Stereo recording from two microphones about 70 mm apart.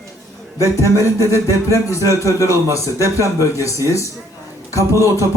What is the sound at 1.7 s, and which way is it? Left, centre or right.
Speech, left.